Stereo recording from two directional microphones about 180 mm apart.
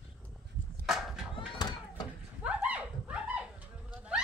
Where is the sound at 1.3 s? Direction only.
25° left (ahead or behind).